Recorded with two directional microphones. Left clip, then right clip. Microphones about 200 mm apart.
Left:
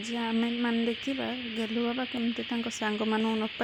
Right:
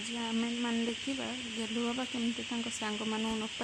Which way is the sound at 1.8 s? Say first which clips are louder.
Left 3 dB; 15° left (ahead or behind).